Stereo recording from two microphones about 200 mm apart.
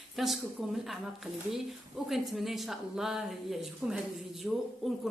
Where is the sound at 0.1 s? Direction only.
Centre (ahead or behind).